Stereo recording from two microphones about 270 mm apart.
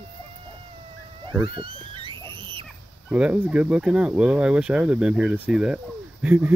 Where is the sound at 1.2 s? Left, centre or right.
Centre.